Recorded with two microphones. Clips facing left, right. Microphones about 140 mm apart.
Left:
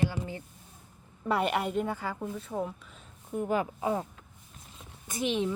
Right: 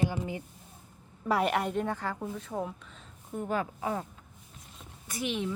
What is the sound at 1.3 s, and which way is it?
A woman's voice, centre (ahead or behind).